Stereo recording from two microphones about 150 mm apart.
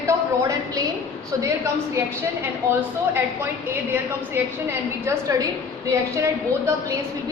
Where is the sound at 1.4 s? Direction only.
20° right (ahead or behind).